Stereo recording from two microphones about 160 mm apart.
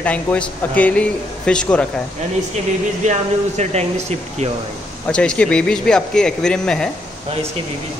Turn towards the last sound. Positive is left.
turn(degrees=5)  # may be behind; listen again after turning